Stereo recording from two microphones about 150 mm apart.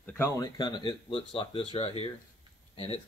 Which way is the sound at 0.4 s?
30° left (ahead or behind).